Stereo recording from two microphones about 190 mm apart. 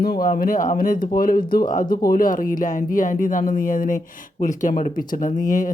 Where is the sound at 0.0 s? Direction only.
50° left (ahead or behind).